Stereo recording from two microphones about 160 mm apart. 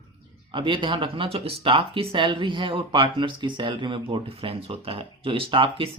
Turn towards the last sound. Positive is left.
turn(degrees=-30)  # may be behind; listen again after turning